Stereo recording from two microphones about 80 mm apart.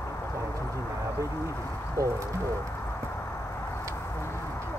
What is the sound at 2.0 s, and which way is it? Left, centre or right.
Bird, right.